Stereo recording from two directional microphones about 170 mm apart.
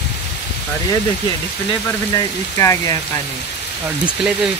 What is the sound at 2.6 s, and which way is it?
Speech, 15° left (ahead or behind).